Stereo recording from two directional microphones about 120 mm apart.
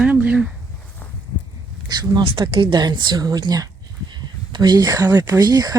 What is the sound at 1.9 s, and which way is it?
Speech, 35° right (ahead or behind).